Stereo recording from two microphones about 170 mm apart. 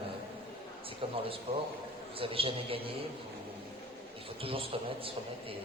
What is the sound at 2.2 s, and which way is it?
Speech, 30° right (ahead or behind).